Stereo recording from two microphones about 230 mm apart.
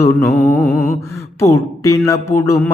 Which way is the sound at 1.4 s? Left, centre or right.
Centre.